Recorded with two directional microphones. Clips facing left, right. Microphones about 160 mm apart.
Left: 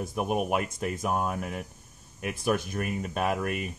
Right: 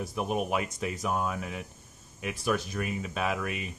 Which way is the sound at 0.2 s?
5° left (ahead or behind).